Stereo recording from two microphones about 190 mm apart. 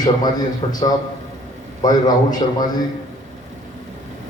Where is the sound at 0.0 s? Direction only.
20° left (ahead or behind).